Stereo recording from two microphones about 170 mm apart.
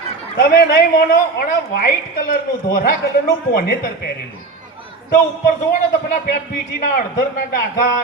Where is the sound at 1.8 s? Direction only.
55° left (ahead or behind).